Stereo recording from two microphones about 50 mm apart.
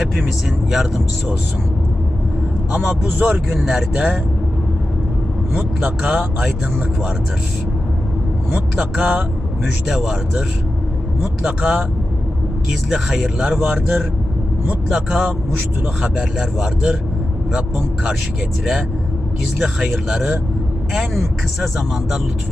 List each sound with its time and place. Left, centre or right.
0.7 s speech: centre
2.7 s a man's voice: centre
3.2 s speech: right
3.5 s a man's voice: centre
5.5 s a man's voice: centre
8.7 s a man's voice: centre
12.9 s a man's voice: centre
14.8 s speech: centre
16.4 s speech: centre
19.5 s speech: centre